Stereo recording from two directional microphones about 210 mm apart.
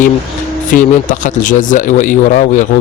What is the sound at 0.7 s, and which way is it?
Speech, 35° left (ahead or behind).